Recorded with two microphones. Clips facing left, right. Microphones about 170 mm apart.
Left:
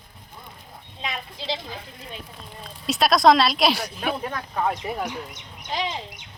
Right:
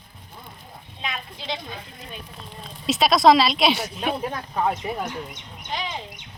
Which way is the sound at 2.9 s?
Centre (ahead or behind).